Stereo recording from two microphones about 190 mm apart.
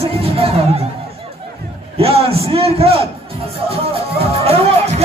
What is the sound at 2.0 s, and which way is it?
Speech, 30° right (ahead or behind).